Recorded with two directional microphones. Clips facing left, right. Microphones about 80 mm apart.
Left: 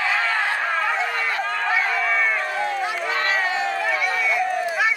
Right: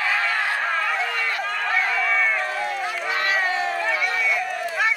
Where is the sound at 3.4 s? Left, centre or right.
Left.